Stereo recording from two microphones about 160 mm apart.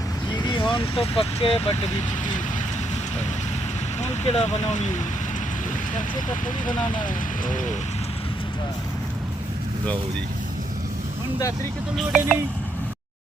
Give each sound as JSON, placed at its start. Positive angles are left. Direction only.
{"t": 0.4, "sound": "speech", "side_deg": 30}
{"t": 4.0, "sound": "speech", "side_deg": 40}
{"t": 6.1, "sound": "speech", "side_deg": 55}
{"t": 11.9, "sound": "speech", "side_deg": 0}